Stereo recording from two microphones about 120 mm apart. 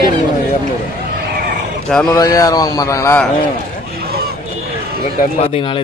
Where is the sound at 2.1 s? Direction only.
30° left (ahead or behind).